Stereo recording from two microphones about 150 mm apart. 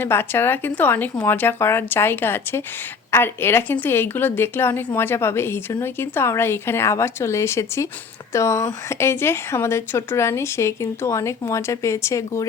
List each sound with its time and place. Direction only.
0.0 s a woman's voice: 15° left (ahead or behind)